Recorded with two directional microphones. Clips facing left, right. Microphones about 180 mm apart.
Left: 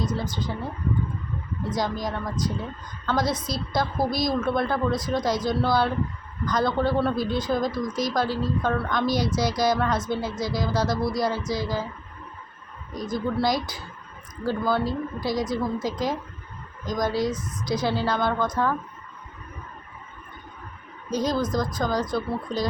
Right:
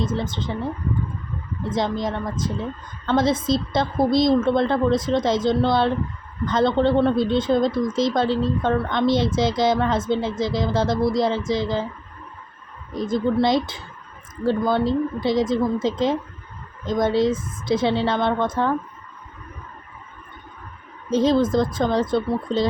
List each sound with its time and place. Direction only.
0.0 s speech: 25° right (ahead or behind)
1.7 s speech: 25° right (ahead or behind)
12.9 s speech: 25° right (ahead or behind)
21.1 s speech: 25° right (ahead or behind)